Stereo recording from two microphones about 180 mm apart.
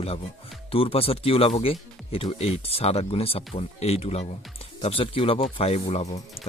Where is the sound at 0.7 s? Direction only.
30° left (ahead or behind).